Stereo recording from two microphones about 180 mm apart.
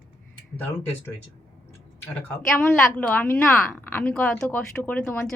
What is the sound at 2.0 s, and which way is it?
A woman's voice, 10° left (ahead or behind).